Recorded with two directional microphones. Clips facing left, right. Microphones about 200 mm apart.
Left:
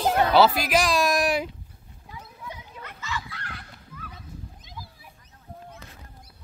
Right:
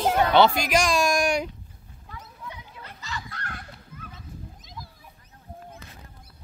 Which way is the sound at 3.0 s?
40° right (ahead or behind).